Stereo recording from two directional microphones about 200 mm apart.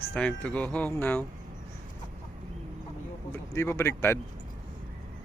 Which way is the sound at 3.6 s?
10° left (ahead or behind).